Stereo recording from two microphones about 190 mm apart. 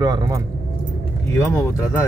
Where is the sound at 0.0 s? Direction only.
20° right (ahead or behind).